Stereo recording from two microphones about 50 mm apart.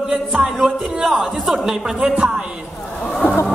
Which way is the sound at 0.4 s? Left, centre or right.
Centre.